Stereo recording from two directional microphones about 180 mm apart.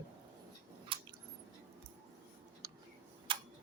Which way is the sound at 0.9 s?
30° right (ahead or behind).